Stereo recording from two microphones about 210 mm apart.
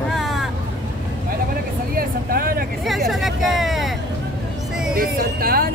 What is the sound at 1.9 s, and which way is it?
Speech, 45° right (ahead or behind).